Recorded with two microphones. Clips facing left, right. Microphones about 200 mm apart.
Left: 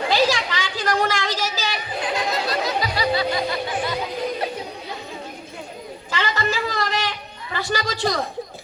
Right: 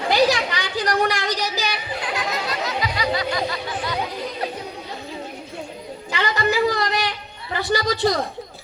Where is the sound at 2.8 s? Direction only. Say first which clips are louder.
Right 1 dB; 35° left (ahead or behind).